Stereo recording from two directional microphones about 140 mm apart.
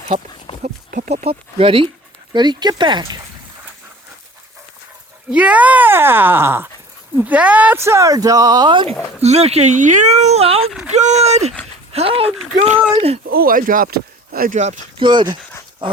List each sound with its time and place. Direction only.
0.6 s a sound: 70° right (ahead or behind)
1.1 s speech: 45° right (ahead or behind)
5.3 s speech: 10° right (ahead or behind); by 9.0 s 35° right (ahead or behind)
9.2 s speech: 50° right (ahead or behind)
10.7 s speech: 5° right (ahead or behind)
10.9 s speech: 55° right (ahead or behind)
13.3 s speech: 90° right
14.9 s speech: 35° right (ahead or behind)